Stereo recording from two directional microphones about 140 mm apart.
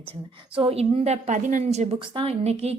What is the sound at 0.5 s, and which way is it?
A woman's voice, 45° right (ahead or behind).